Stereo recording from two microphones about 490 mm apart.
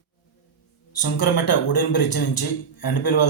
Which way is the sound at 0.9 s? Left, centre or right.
Left.